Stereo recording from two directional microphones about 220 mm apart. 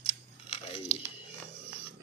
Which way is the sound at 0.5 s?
25° left (ahead or behind).